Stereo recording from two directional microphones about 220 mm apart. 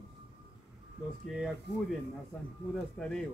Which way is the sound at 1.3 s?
Centre (ahead or behind).